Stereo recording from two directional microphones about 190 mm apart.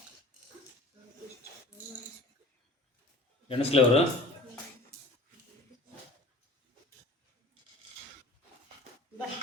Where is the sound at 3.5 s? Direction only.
30° left (ahead or behind).